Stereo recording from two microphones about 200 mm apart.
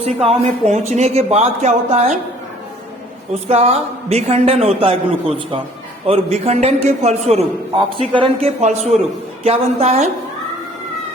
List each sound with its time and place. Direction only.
0.0 s speech: 30° right (ahead or behind)
3.5 s speech: 30° right (ahead or behind)
6.1 s a man's voice: 30° right (ahead or behind)